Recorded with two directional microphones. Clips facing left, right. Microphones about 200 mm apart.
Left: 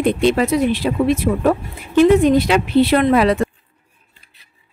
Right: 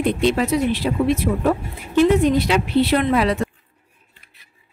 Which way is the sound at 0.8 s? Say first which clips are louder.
Left 2 dB; 70° left (ahead or behind).